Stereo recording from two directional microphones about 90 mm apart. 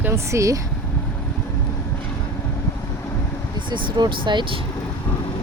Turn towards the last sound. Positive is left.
turn(degrees=-65)  # may be behind; listen again after turning